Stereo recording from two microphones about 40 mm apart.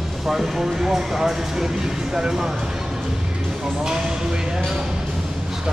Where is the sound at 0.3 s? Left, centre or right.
Centre.